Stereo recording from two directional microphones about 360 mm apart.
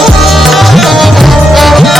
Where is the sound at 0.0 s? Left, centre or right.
Centre.